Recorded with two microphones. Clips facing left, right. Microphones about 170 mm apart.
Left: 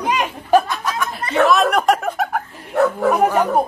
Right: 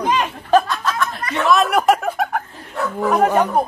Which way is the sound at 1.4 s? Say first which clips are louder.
Left 1 dB; centre (ahead or behind).